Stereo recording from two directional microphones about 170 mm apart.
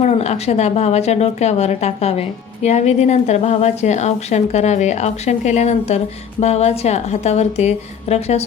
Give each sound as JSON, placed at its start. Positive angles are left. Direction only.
{"t": 0.0, "sound": "a woman's voice", "side_deg": 40}